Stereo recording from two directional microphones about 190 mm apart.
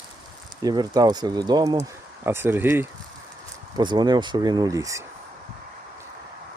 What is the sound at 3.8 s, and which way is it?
Speech, 20° right (ahead or behind).